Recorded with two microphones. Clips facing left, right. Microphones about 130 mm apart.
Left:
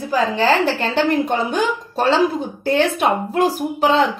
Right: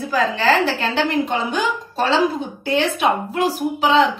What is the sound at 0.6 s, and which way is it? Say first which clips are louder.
Speech: left 2 dB; 50° left (ahead or behind).